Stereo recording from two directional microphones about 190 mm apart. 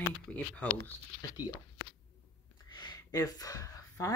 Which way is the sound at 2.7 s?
25° left (ahead or behind).